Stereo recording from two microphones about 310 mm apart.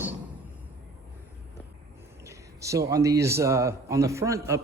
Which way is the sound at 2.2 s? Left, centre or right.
Centre.